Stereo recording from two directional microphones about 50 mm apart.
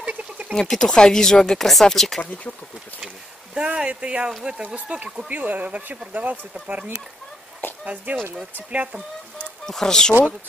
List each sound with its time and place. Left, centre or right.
0.0 s a sound: right
0.6 s speech: centre
3.5 s speech: right
6.7 s speech: right
9.7 s speech: centre